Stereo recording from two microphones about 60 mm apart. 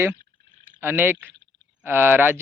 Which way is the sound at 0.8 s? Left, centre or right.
Right.